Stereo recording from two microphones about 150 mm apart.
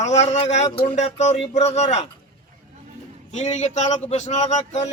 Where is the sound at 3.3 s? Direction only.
50° left (ahead or behind).